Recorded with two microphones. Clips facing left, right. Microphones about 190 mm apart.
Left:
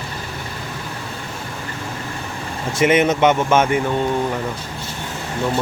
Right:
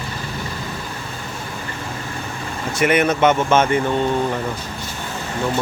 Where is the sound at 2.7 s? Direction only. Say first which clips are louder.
Left 2 dB; 25° left (ahead or behind).